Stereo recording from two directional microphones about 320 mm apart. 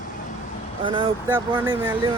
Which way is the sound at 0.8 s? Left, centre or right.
Centre.